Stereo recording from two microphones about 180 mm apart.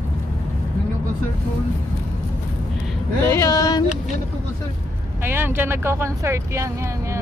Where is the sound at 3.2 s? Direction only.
15° left (ahead or behind).